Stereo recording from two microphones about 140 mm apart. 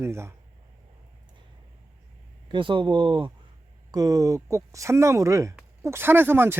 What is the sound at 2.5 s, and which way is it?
Speech, 35° right (ahead or behind).